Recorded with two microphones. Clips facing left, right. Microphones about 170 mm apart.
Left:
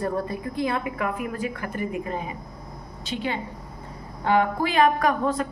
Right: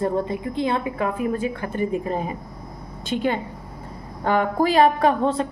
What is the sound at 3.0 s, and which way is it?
A woman's voice, 50° right (ahead or behind).